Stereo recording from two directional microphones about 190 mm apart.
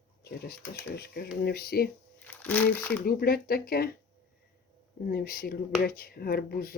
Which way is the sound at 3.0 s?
55° left (ahead or behind).